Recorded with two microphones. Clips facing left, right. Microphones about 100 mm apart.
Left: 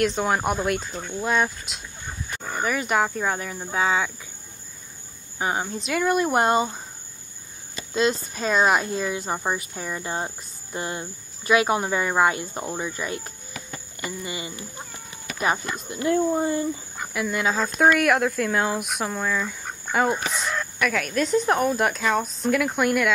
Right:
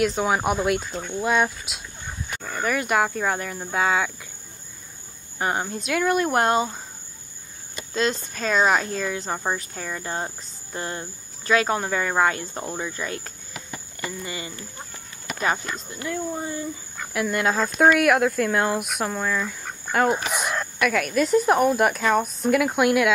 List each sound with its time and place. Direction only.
0.0 s speech: centre (ahead or behind)
5.4 s speech: centre (ahead or behind)
7.9 s speech: 5° left (ahead or behind)
14.0 s speech: 10° left (ahead or behind)
15.9 s speech: 20° left (ahead or behind)
17.1 s speech: centre (ahead or behind)